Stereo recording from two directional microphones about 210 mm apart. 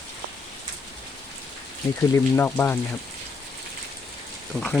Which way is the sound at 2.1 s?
10° left (ahead or behind).